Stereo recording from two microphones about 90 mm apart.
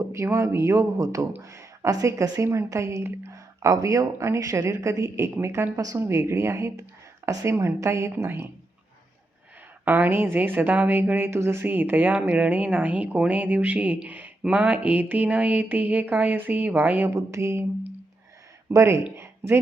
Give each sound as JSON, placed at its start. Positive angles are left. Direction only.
{"t": 0.1, "sound": "speech", "side_deg": -35}
{"t": 9.8, "sound": "speech", "side_deg": -20}
{"t": 17.1, "sound": "speech", "side_deg": -30}
{"t": 18.7, "sound": "speech", "side_deg": -30}
{"t": 19.1, "sound": "a sound", "side_deg": -30}